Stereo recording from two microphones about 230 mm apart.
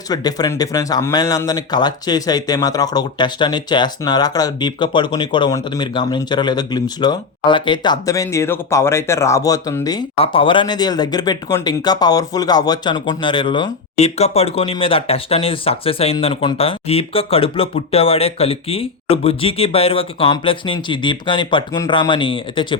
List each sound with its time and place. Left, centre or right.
0.1 s speech: centre